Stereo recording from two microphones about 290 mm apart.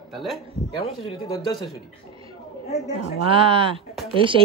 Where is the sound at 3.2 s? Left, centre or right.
Centre.